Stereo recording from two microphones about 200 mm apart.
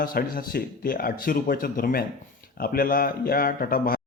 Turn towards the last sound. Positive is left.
turn(degrees=45)  # may be behind; listen again after turning